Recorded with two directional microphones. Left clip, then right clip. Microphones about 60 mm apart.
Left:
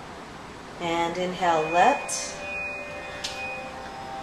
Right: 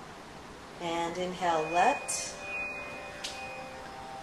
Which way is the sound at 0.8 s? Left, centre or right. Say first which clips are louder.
Left 7 dB; centre.